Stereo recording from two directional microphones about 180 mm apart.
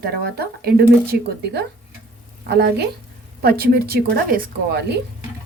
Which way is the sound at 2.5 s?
65° right (ahead or behind).